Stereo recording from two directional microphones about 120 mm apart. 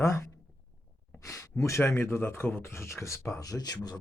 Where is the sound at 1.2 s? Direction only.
25° left (ahead or behind).